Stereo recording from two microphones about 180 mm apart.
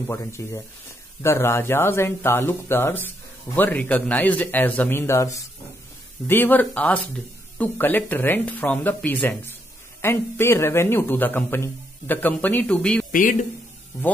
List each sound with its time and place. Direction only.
0.1 s a man's voice: 15° left (ahead or behind)
13.1 s a man's voice: 50° left (ahead or behind)